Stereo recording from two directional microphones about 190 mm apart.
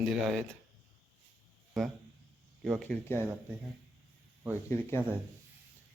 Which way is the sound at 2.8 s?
5° left (ahead or behind).